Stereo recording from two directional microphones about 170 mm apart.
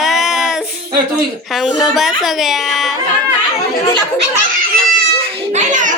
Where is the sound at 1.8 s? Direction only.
Centre (ahead or behind).